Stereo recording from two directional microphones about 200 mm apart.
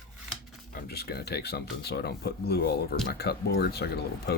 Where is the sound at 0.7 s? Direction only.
50° left (ahead or behind).